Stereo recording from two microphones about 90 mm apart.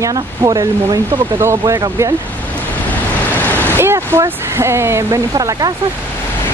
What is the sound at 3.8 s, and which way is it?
Speech, 30° right (ahead or behind).